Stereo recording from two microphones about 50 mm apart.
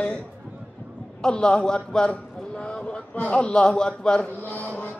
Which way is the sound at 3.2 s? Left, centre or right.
Left.